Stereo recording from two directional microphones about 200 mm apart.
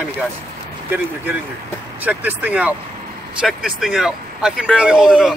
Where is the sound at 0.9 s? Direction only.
10° right (ahead or behind).